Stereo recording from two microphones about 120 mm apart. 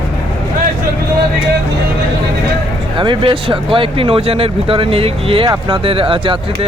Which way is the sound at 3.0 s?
45° right (ahead or behind).